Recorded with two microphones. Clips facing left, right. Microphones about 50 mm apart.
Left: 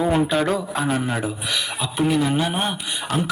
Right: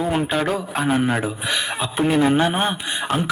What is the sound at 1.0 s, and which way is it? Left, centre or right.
A man's voice, right.